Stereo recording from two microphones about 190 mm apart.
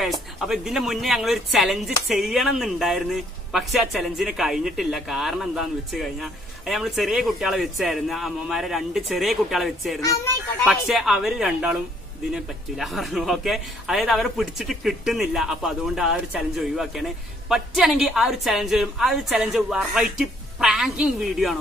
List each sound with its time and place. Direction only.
0.0 s speech: centre (ahead or behind)